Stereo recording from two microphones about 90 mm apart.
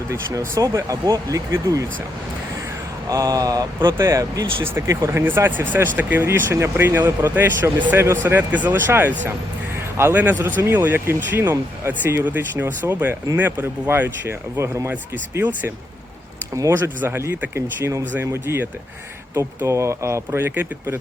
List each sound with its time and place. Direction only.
0.1 s speech: 35° right (ahead or behind)
3.1 s speech: 40° right (ahead or behind)
3.8 s speech: 30° right (ahead or behind)
4.6 s speech: 25° right (ahead or behind)
4.9 s speech: 35° right (ahead or behind)
5.2 s speech: 25° right (ahead or behind)